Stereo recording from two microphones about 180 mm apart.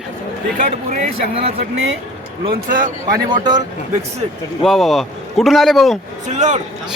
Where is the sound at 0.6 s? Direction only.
45° right (ahead or behind).